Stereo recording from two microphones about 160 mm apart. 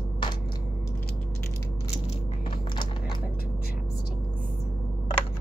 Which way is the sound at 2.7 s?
30° left (ahead or behind).